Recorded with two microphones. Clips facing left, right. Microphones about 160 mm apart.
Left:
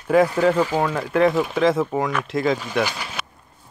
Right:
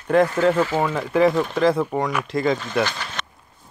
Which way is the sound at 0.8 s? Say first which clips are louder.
Even; centre (ahead or behind).